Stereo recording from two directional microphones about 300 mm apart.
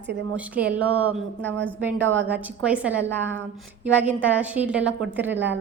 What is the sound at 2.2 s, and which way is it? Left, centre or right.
A woman's voice, centre.